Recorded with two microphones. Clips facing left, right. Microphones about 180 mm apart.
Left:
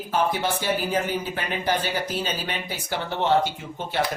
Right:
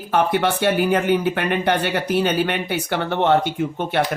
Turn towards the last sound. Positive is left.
turn(degrees=-60)  # may be behind; listen again after turning